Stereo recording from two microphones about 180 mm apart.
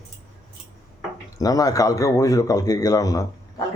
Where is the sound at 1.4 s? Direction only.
20° left (ahead or behind).